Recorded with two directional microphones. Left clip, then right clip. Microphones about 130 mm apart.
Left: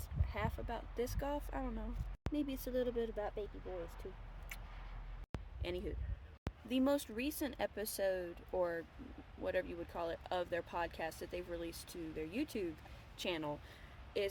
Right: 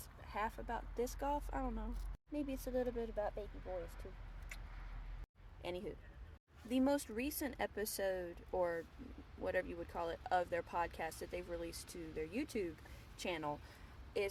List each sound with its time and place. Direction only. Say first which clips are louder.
0.3 s speech: right 1 dB; 15° left (ahead or behind)
2.3 s speech: left 1 dB; 30° left (ahead or behind)
5.6 s speech: left 1 dB; 20° left (ahead or behind)